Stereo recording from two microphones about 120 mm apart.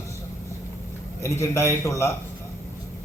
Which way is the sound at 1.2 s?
25° left (ahead or behind).